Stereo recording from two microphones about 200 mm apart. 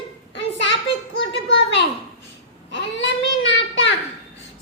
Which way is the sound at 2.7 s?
60° left (ahead or behind).